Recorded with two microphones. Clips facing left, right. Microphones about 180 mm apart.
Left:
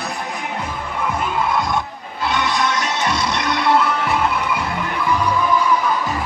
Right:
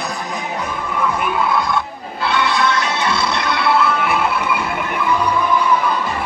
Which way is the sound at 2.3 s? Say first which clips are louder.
Right 2 dB; 45° left (ahead or behind).